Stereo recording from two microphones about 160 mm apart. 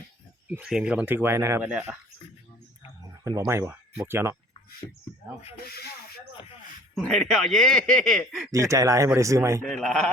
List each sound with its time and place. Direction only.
0.4 s speech: 10° right (ahead or behind)
3.0 s speech: 20° right (ahead or behind)
4.8 s speech: 20° left (ahead or behind)
5.6 s speech: 75° left (ahead or behind)
6.9 s speech: centre (ahead or behind)
8.5 s speech: 20° right (ahead or behind)
9.6 s speech: centre (ahead or behind)